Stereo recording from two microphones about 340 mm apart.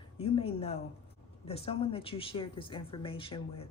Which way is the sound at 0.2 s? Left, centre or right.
Centre.